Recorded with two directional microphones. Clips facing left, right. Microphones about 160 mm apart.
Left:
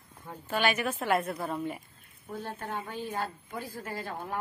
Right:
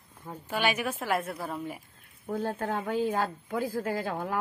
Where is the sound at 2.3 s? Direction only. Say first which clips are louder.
Right 6 dB; 90° right.